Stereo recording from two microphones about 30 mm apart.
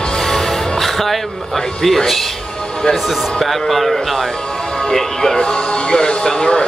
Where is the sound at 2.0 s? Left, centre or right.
Centre.